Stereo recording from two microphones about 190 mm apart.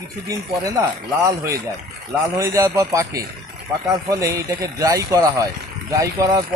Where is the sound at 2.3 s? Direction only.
15° right (ahead or behind).